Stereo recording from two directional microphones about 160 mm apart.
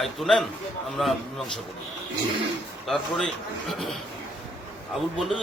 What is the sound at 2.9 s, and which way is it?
A man's voice, 5° left (ahead or behind).